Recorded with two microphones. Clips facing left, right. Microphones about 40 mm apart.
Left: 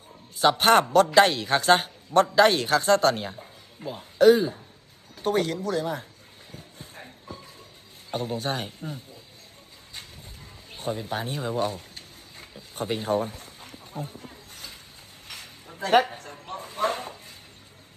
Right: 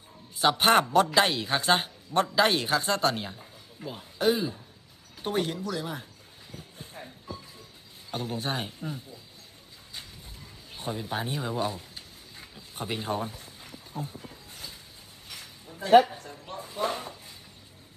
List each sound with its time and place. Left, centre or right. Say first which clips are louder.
0.3 s speech: left 3 dB; centre
3.2 s a sound: left 4 dB; centre
4.4 s speech: left 5 dB; centre
5.2 s a man's voice: left 4 dB; centre
8.1 s a man's voice: left 4 dB; left
8.4 s a man's voice: left 2 dB; centre
10.8 s speech: left 2 dB; centre
13.6 s a sound: left 1 dB; left
15.3 s a sound: left 2 dB; left